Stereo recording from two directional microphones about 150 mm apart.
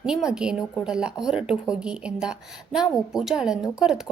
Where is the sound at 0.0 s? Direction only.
5° right (ahead or behind).